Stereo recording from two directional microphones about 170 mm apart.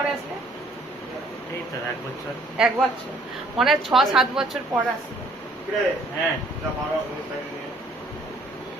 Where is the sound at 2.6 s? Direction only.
5° right (ahead or behind).